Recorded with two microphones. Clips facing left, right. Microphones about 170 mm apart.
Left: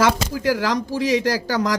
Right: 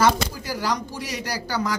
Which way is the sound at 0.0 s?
90° left.